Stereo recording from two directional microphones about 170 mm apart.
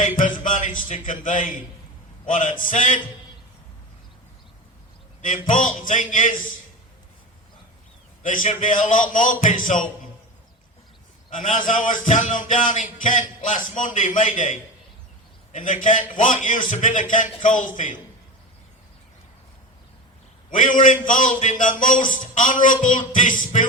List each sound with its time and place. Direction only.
0.3 s a man's voice: 50° left (ahead or behind)
5.5 s a man's voice: 50° left (ahead or behind)
8.2 s a man's voice: 50° left (ahead or behind)
11.3 s a man's voice: 50° left (ahead or behind)
20.5 s a man's voice: 50° left (ahead or behind)